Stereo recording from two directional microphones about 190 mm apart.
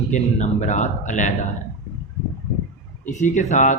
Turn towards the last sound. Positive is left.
turn(degrees=40)  # may be behind; listen again after turning